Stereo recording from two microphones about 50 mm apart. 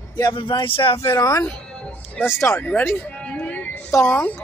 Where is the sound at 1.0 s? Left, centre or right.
Left.